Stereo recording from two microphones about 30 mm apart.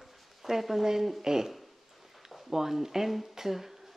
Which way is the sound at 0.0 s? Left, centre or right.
Centre.